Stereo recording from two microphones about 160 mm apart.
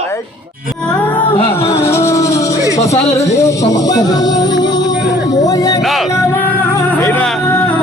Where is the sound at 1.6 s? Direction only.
40° left (ahead or behind).